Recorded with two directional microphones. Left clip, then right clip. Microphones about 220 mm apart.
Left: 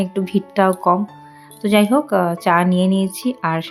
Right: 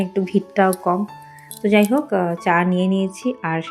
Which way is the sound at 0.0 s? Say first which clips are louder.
Even; 10° left (ahead or behind).